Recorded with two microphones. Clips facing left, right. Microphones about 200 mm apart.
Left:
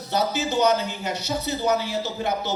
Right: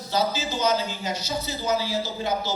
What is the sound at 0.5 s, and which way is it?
A man's voice, 65° left (ahead or behind).